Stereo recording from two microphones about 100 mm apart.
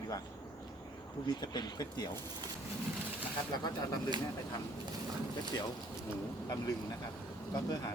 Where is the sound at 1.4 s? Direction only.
45° left (ahead or behind).